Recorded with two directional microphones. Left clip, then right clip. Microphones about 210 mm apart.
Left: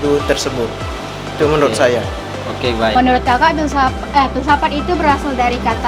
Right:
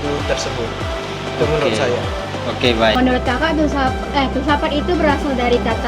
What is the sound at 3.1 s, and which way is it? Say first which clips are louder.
Speech: left 5 dB; 35° left (ahead or behind).